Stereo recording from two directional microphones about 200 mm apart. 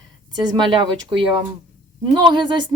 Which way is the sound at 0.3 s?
20° right (ahead or behind).